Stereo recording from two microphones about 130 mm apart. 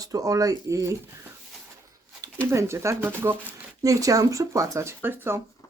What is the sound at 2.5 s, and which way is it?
Speech, 20° right (ahead or behind).